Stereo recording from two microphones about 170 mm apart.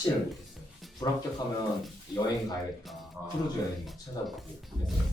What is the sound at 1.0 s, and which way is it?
Speech, 20° left (ahead or behind).